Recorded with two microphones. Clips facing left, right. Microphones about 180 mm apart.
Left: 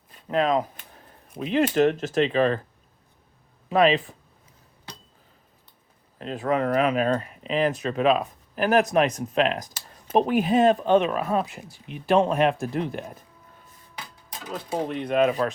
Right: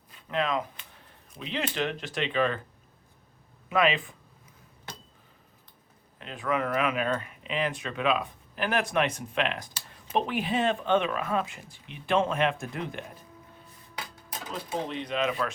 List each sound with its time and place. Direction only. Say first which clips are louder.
0.3 s speech: left 6 dB; 40° left (ahead or behind)
3.7 s speech: left 6 dB; 35° left (ahead or behind)
6.1 s speech: left 5 dB; 40° left (ahead or behind)
14.8 s speech: left 10 dB; 50° left (ahead or behind)